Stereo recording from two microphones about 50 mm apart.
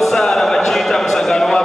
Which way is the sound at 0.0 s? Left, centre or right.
Centre.